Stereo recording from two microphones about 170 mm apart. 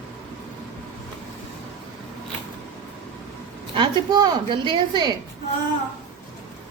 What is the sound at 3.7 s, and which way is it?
A woman's voice, 30° right (ahead or behind).